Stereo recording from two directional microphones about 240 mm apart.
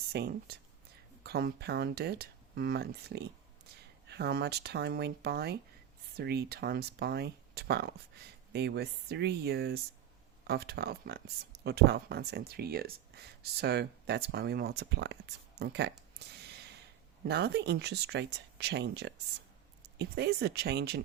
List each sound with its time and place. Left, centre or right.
0.1 s speech: right